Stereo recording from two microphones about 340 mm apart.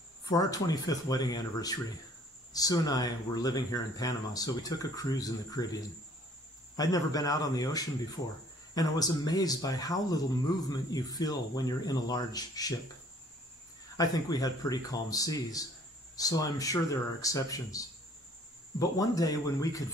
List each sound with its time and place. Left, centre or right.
0.2 s speech: centre
6.8 s speech: centre
13.9 s speech: centre